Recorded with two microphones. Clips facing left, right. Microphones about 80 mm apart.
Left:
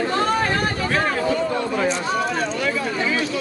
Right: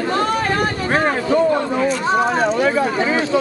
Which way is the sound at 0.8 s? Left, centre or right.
Right.